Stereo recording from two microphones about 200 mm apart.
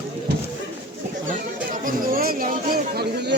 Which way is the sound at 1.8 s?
45° right (ahead or behind).